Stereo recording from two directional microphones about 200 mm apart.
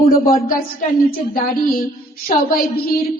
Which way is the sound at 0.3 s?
45° left (ahead or behind).